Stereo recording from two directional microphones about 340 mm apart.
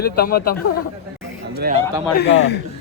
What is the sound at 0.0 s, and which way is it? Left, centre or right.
Speech, left.